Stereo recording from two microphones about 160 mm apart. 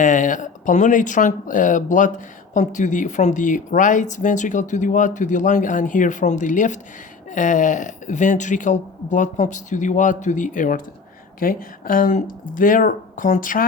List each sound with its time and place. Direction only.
0.0 s speech: 55° left (ahead or behind)